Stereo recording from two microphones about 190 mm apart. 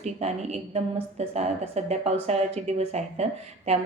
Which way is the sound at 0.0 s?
35° right (ahead or behind).